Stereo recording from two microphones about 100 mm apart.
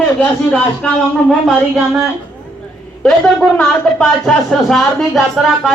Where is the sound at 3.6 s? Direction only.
5° left (ahead or behind).